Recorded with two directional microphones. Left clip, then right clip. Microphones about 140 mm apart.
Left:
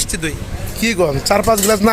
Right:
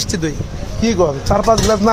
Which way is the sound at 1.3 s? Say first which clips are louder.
Even; 35° left (ahead or behind).